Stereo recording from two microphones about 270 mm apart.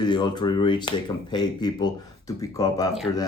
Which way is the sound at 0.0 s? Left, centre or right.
Centre.